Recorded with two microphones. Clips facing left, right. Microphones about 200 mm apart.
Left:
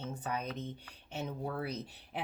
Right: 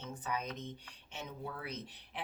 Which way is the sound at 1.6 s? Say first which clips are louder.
Left 6 dB; 35° left (ahead or behind).